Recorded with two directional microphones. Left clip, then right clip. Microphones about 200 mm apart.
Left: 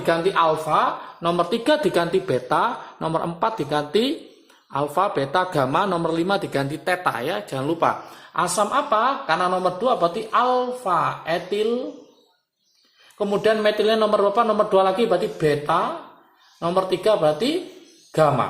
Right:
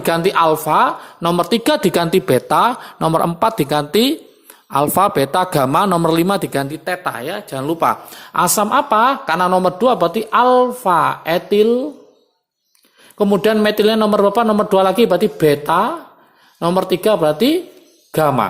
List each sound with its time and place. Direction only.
0.0 s speech: 45° right (ahead or behind); by 7.9 s 30° right (ahead or behind)
8.3 s a woman's voice: 50° right (ahead or behind)
13.1 s a woman's voice: 50° right (ahead or behind)